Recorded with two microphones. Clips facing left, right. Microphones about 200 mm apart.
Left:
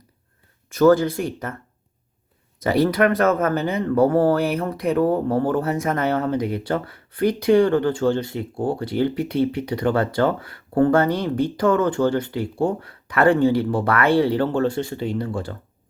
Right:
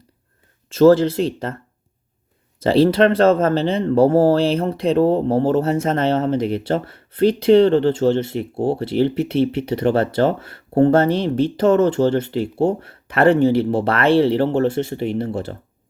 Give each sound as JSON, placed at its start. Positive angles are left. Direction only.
{"t": 0.7, "sound": "speech", "side_deg": -25}
{"t": 2.6, "sound": "speech", "side_deg": -30}